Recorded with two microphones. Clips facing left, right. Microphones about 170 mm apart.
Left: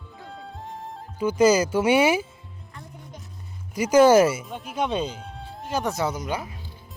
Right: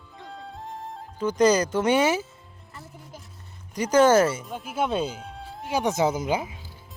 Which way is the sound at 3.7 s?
10° left (ahead or behind).